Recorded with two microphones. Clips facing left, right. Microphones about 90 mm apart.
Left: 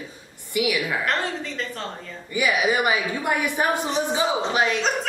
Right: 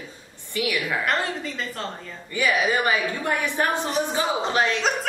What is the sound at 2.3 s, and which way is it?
A woman's voice, 15° left (ahead or behind).